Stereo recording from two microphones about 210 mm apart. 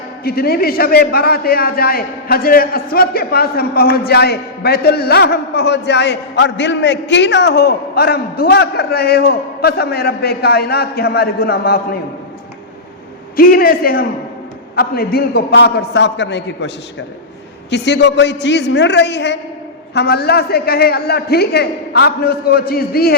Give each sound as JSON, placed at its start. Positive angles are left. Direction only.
{"t": 0.3, "sound": "a man's voice", "side_deg": 45}
{"t": 13.3, "sound": "a man's voice", "side_deg": 45}